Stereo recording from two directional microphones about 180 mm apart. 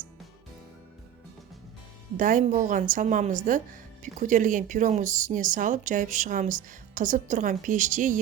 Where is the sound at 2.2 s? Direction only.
45° right (ahead or behind).